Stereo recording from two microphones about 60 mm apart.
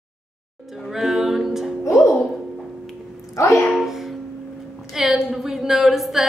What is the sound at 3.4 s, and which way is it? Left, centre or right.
Music, left.